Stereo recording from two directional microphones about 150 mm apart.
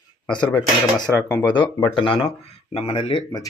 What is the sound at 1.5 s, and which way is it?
Speech, 30° left (ahead or behind).